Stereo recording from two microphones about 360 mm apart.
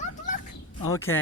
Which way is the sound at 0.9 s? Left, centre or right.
Centre.